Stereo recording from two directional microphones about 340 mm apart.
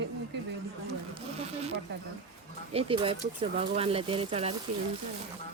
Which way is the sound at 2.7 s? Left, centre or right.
Centre.